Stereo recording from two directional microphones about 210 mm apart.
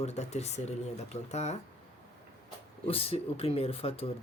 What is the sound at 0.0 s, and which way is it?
Speech, 30° left (ahead or behind).